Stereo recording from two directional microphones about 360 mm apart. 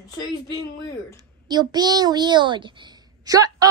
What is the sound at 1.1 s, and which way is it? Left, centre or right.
A child's voice, centre.